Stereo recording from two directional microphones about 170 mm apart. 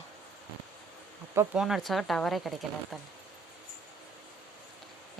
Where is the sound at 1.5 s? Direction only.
5° right (ahead or behind).